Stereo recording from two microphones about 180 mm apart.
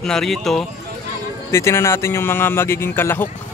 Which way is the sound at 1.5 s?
15° left (ahead or behind).